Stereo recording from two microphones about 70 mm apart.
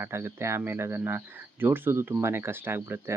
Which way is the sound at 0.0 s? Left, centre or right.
Right.